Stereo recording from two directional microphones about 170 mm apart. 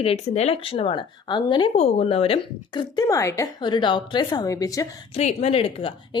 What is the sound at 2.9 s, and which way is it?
Speech, 20° left (ahead or behind).